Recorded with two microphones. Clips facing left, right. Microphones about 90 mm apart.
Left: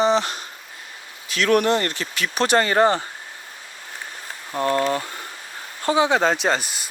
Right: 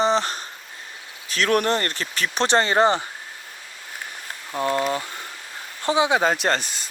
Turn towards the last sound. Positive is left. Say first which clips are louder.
# left 1 dB
turn(degrees=10)  # may be behind; listen again after turning